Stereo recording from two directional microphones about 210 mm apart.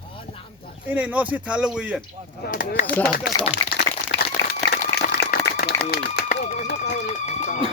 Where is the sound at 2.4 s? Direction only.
40° left (ahead or behind).